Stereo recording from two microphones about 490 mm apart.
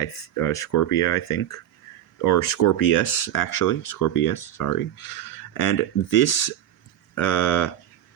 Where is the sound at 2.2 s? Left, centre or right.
Left.